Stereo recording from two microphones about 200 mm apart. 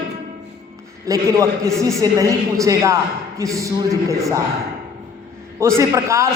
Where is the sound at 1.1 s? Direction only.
15° right (ahead or behind).